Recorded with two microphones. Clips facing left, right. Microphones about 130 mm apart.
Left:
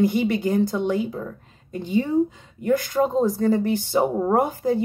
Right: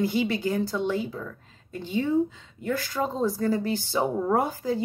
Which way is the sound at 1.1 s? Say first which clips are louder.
Left 5 dB; 30° left (ahead or behind).